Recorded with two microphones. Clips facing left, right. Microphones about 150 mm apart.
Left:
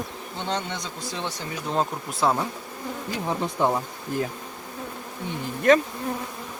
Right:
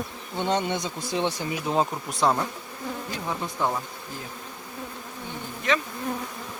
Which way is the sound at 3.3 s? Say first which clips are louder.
Left 4 dB; 25° left (ahead or behind).